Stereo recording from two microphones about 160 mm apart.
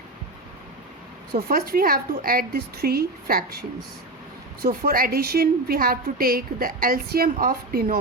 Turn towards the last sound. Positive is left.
turn(degrees=-70)  # may be behind; listen again after turning